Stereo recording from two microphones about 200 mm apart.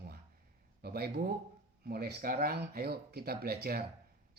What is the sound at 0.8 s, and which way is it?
Speech, 50° right (ahead or behind).